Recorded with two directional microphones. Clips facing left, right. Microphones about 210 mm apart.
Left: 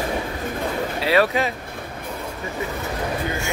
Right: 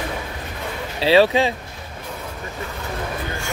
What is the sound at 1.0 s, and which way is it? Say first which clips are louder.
Speech: right 5 dB; 30° right (ahead or behind).